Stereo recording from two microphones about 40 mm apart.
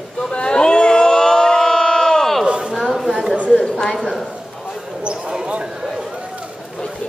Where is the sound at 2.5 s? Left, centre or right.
Right.